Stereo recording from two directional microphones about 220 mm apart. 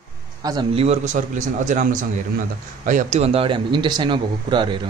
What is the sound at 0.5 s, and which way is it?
Speech, 25° right (ahead or behind).